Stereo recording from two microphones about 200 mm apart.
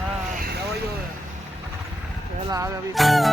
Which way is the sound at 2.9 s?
Centre (ahead or behind).